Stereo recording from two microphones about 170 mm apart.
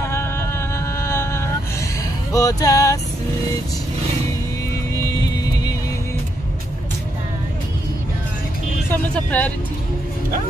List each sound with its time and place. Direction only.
0.0 s a sound: 15° left (ahead or behind)
2.3 s male singing: 20° left (ahead or behind)
4.9 s music: 20° left (ahead or behind)
8.9 s speech: 10° left (ahead or behind)